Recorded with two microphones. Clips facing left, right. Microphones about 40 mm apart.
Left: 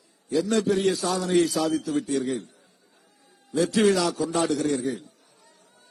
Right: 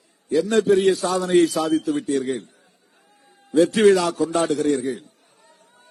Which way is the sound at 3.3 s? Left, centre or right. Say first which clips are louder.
Right 7 dB; right.